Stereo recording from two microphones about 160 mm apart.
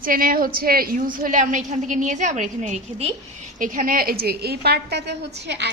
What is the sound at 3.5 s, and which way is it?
A woman's voice, 55° right (ahead or behind).